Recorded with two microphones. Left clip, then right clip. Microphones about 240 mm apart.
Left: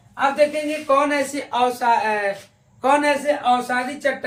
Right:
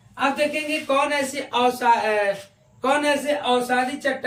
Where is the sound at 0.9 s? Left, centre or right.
Centre.